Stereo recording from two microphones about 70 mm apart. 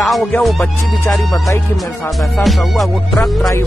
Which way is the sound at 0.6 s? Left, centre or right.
Left.